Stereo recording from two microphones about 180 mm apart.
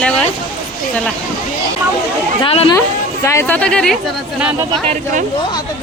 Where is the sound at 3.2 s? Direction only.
15° left (ahead or behind).